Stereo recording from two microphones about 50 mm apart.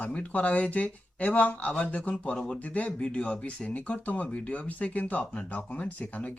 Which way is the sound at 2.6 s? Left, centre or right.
Left.